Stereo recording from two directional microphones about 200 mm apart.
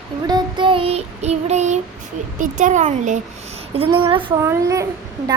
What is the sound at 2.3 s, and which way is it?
Speech, 40° right (ahead or behind).